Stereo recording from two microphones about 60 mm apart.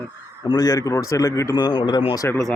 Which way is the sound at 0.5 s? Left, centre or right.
Left.